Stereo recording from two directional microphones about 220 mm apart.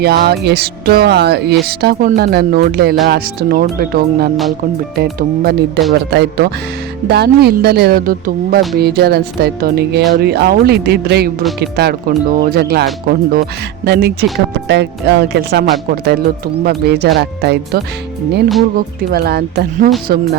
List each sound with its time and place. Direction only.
0.0 s speech: 45° right (ahead or behind)
19.1 s speech: 45° right (ahead or behind)